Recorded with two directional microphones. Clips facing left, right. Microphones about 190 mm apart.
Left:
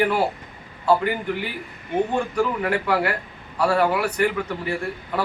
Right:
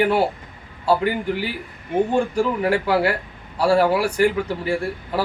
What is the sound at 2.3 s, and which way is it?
Speech, 30° right (ahead or behind).